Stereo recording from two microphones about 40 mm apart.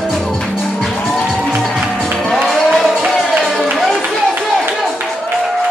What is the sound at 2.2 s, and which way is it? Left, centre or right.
Music, centre.